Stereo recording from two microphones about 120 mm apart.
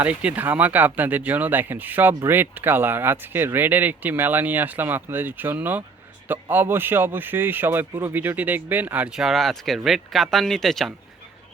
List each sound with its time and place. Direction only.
0.0 s speech: 10° right (ahead or behind)